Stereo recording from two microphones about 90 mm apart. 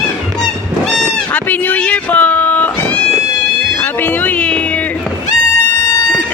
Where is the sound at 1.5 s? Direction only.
15° left (ahead or behind).